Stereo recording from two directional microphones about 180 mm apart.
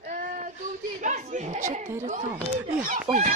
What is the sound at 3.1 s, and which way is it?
Speech, 30° right (ahead or behind).